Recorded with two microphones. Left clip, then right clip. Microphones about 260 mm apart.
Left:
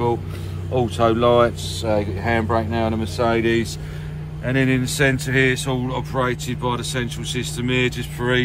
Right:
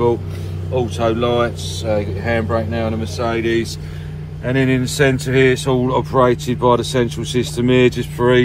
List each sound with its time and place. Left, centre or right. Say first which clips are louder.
0.7 s speech: even; centre
4.5 s speech: right 3 dB; centre